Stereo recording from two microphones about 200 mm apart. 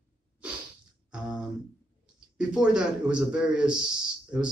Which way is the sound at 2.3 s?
5° right (ahead or behind).